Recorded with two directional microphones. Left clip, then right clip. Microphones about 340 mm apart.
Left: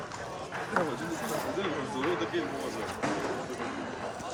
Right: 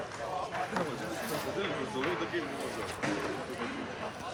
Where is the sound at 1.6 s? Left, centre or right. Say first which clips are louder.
Left 2 dB; left.